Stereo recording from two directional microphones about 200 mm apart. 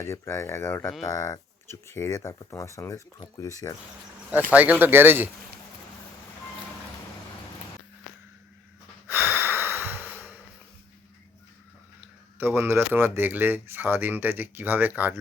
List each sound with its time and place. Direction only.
0.0 s speech: 15° left (ahead or behind)
4.5 s speech: 5° right (ahead or behind)
9.0 s breathing: 10° right (ahead or behind)
11.9 s speech: 10° right (ahead or behind)